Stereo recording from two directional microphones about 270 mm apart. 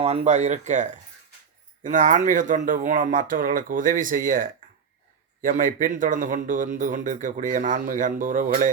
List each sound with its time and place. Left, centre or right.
0.0 s speech: right